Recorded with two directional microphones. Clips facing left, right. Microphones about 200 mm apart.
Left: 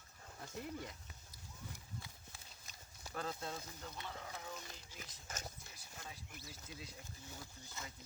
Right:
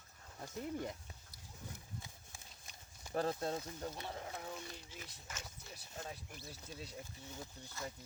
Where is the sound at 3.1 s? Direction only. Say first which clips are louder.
Right 7 dB; 35° right (ahead or behind).